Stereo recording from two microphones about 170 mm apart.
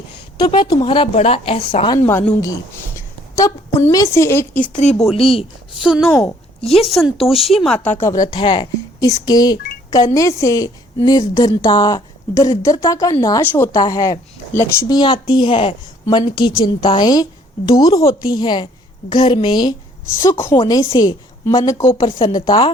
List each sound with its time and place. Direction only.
0.3 s a woman's voice: 25° left (ahead or behind)
2.0 s a woman's voice: 15° left (ahead or behind)
4.7 s speech: 40° left (ahead or behind)
5.8 s speech: centre (ahead or behind)
6.1 s a woman's voice: 15° left (ahead or behind)
6.7 s speech: centre (ahead or behind)
7.9 s a woman's voice: 15° left (ahead or behind)
20.2 s a woman's voice: 15° left (ahead or behind)
20.6 s a woman's voice: 25° left (ahead or behind)